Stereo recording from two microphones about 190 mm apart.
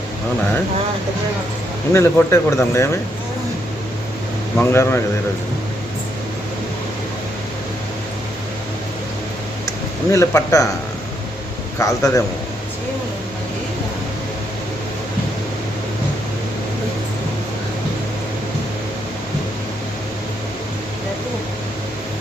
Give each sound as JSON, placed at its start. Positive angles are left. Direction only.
{"t": 1.9, "sound": "speech", "side_deg": 15}
{"t": 4.5, "sound": "speech", "side_deg": 15}
{"t": 10.1, "sound": "speech", "side_deg": 15}
{"t": 11.8, "sound": "speech", "side_deg": 15}